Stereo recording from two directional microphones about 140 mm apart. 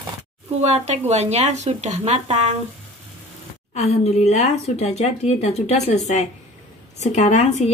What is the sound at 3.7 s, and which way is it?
A woman's voice, 50° left (ahead or behind).